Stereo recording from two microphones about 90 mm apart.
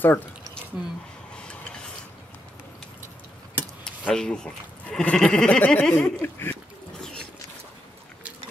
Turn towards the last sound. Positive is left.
turn(degrees=25)  # may be behind; listen again after turning